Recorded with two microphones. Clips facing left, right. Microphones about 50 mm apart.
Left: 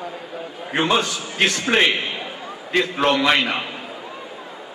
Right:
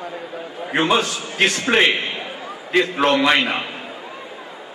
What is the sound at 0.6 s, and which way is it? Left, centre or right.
A man's voice, centre.